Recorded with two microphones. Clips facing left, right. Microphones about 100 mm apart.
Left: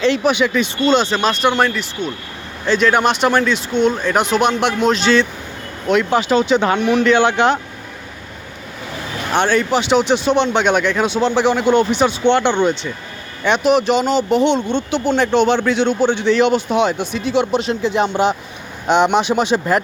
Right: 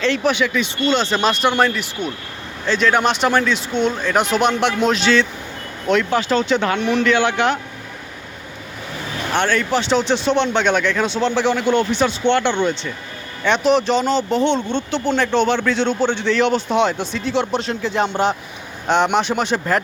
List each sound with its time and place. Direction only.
0.0 s speech: 15° left (ahead or behind)
0.5 s speech: 40° left (ahead or behind)
1.1 s speech: centre (ahead or behind)
2.6 s speech: 5° left (ahead or behind)
5.9 s speech: 15° left (ahead or behind)
6.7 s speech: 5° left (ahead or behind)
7.0 s speech: 25° left (ahead or behind)
9.3 s speech: 20° left (ahead or behind)
15.8 s speech: 10° left (ahead or behind)
16.6 s speech: 5° left (ahead or behind)